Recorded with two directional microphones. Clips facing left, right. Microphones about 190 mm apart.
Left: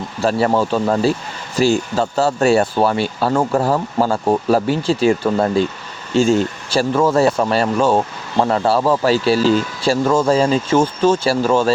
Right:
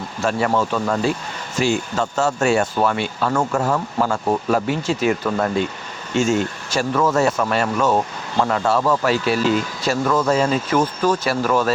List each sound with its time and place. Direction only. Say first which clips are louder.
0.2 s speech: left 4 dB; 35° left (ahead or behind)